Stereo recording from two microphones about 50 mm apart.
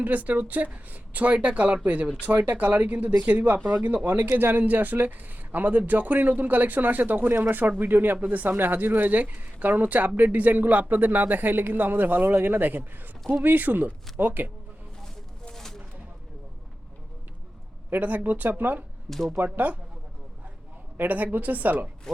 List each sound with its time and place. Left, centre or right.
0.0 s speech: right
15.0 s a sound: centre
17.9 s speech: right
19.1 s speech: centre
19.5 s speech: right
21.0 s speech: right